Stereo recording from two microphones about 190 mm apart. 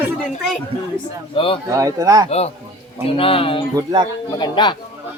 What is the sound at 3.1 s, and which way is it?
Speech, 30° left (ahead or behind).